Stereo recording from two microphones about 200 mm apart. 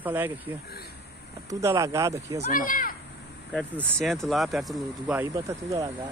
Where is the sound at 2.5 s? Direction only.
45° left (ahead or behind).